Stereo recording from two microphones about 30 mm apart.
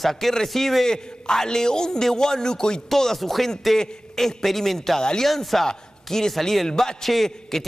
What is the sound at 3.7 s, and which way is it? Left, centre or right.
A man's voice, centre.